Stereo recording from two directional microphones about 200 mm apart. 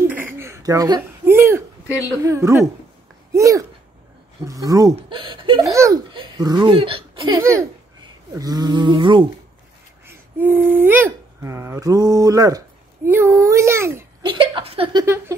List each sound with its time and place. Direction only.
0.0 s a sound: 10° right (ahead or behind)
2.2 s a woman's voice: 15° right (ahead or behind)
10.0 s speech: 10° right (ahead or behind)
14.2 s speech: 25° right (ahead or behind)